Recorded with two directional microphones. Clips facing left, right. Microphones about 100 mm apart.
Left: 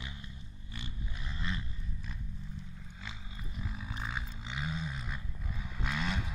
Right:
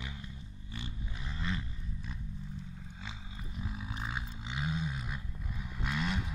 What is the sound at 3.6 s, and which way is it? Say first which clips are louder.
Roar: right 1 dB; 15° right (ahead or behind).